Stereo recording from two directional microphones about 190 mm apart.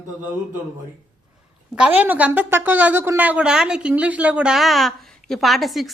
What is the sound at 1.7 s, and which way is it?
A woman's voice, 5° right (ahead or behind).